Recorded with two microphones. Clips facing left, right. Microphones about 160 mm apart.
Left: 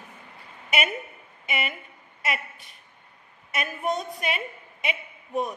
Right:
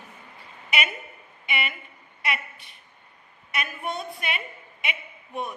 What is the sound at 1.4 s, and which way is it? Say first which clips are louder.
A woman's voice: left 1 dB; 40° left (ahead or behind).